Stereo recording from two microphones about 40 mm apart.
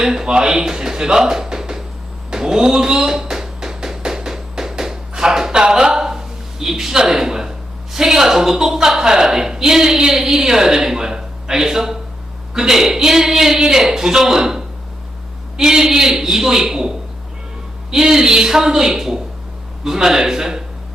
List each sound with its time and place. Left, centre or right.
0.0 s a woman's voice: centre
2.3 s a sound: centre
7.0 s a woman's voice: centre